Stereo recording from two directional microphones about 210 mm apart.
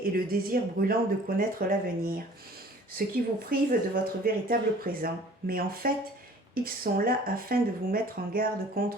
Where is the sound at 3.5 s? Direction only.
45° right (ahead or behind).